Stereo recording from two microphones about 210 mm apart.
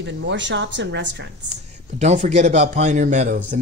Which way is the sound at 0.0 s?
55° right (ahead or behind).